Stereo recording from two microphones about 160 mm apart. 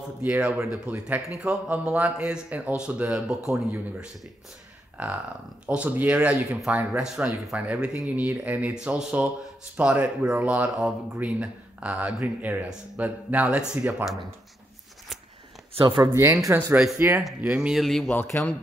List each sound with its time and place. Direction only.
0.2 s speech: 10° right (ahead or behind)
15.7 s speech: 30° right (ahead or behind)
17.2 s speech: 5° right (ahead or behind)
18.2 s speech: 15° left (ahead or behind)